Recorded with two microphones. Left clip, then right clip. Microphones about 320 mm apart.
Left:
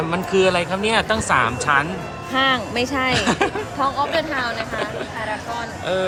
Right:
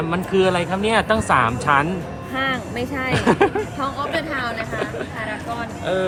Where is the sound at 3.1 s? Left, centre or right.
Centre.